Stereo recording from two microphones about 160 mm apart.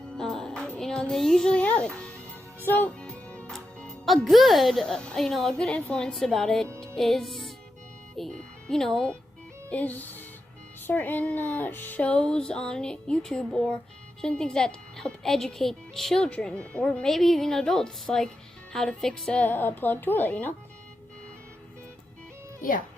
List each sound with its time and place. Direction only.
0.2 s music: 5° left (ahead or behind)
2.6 s speech: 10° left (ahead or behind)
6.7 s music: 5° left (ahead or behind)
8.1 s speech: 5° left (ahead or behind)
22.6 s speech: 60° left (ahead or behind)